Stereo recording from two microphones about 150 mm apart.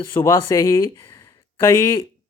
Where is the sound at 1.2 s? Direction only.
15° left (ahead or behind).